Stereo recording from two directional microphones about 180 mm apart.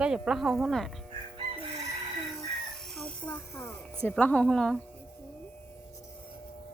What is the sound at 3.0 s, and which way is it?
Music, 5° left (ahead or behind).